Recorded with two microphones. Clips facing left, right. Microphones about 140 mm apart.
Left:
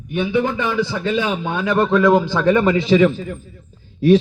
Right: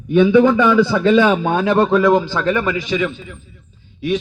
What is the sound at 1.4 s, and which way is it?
Speech, 45° right (ahead or behind).